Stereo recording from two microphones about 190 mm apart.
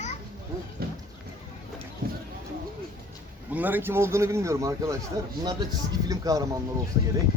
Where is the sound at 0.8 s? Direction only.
55° right (ahead or behind).